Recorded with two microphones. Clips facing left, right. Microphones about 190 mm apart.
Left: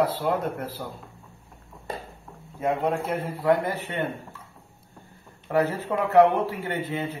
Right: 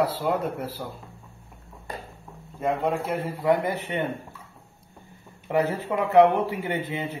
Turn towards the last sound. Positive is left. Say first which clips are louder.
# even
turn(degrees=-15)  # may be behind; listen again after turning